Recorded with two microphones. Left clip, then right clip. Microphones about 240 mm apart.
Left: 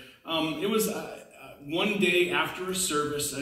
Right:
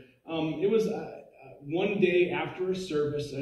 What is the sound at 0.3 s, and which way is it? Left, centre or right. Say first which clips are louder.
A man's voice: even; left.